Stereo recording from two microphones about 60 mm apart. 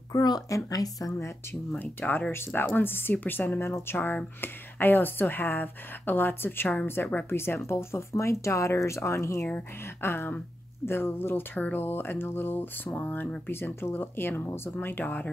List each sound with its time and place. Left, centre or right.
0.1 s a woman's voice: left
1.8 s speech: left
10.0 s speech: left
13.5 s speech: left